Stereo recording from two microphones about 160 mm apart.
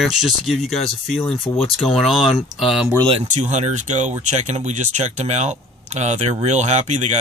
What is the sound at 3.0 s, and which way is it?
Speech, 35° right (ahead or behind).